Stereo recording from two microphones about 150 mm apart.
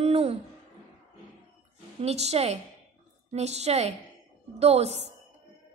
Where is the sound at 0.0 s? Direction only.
40° right (ahead or behind).